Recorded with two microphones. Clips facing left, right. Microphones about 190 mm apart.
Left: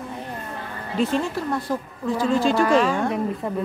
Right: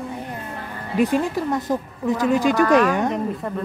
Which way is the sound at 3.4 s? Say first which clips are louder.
Left 1 dB; 5° left (ahead or behind).